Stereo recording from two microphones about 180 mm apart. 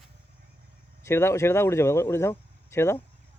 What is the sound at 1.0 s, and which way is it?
Speech, 15° left (ahead or behind).